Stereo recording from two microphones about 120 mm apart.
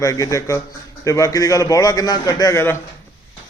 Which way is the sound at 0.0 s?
30° left (ahead or behind).